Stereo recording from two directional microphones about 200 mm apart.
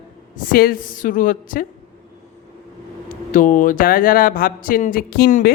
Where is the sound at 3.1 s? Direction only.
40° left (ahead or behind).